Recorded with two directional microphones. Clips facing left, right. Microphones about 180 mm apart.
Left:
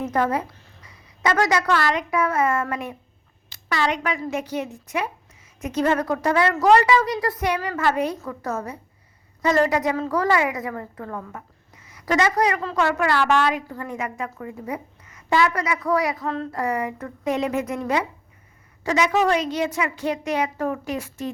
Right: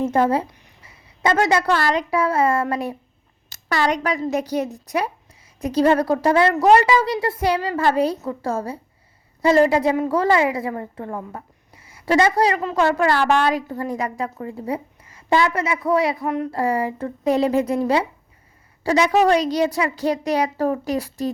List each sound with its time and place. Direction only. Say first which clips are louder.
0.0 s a woman's voice: right 4 dB; 25° right (ahead or behind)
16.5 s a woman's voice: right 4 dB; 30° right (ahead or behind)